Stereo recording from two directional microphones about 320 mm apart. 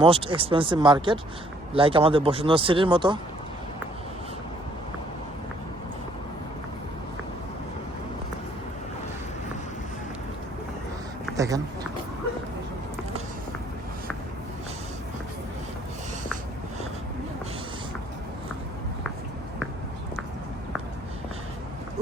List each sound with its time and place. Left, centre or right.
0.0 s speech: centre
11.3 s speech: centre